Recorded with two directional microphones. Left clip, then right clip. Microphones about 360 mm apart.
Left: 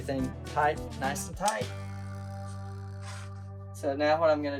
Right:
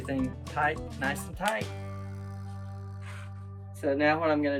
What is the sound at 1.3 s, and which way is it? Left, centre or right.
Speech, centre.